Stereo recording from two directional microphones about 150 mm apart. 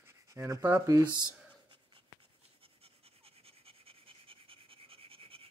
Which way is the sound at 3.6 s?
40° right (ahead or behind).